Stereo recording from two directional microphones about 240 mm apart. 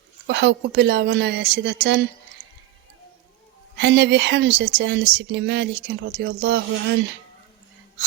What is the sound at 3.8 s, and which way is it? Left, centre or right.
Speech, right.